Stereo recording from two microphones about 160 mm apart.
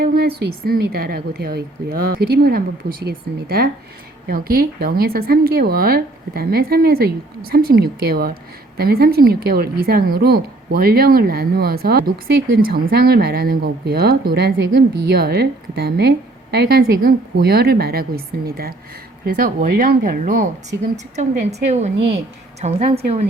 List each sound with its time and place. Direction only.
0.0 s a woman's voice: 75° right (ahead or behind); by 20.4 s 60° right (ahead or behind)
20.9 s a woman's voice: 45° right (ahead or behind)